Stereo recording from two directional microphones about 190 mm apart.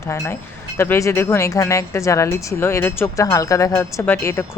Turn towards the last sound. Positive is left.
turn(degrees=15)  # may be behind; listen again after turning